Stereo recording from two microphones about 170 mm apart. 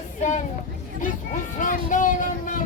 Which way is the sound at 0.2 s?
45° left (ahead or behind).